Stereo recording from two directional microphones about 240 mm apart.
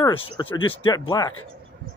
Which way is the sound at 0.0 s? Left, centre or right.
Centre.